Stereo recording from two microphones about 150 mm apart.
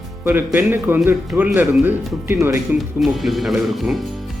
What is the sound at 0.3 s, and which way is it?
Speech, 15° right (ahead or behind).